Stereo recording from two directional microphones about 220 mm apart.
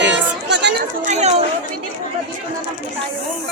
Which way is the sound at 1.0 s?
30° right (ahead or behind).